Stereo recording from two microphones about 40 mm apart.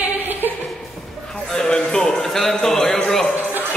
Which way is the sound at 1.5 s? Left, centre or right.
Centre.